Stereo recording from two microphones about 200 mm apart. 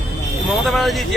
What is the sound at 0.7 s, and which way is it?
Speech, centre (ahead or behind).